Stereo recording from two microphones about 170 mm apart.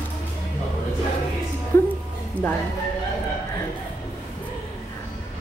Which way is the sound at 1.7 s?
15° left (ahead or behind).